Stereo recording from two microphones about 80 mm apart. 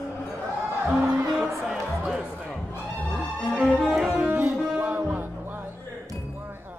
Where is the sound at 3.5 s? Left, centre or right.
Centre.